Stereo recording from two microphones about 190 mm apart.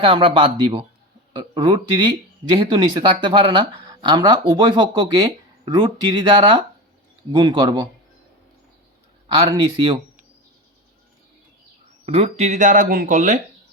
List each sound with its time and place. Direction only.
0.0 s speech: 25° right (ahead or behind)
9.3 s speech: 25° right (ahead or behind)
12.0 s speech: 35° right (ahead or behind)